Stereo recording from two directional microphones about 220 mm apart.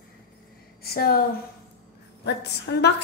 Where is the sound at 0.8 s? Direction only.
45° left (ahead or behind).